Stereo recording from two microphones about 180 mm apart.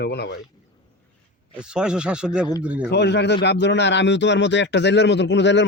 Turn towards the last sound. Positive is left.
turn(degrees=80)